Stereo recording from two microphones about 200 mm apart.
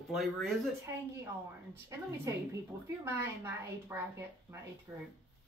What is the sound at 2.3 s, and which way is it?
A woman's voice, 15° right (ahead or behind).